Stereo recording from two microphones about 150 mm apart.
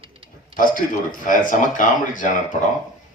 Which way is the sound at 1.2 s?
60° left (ahead or behind).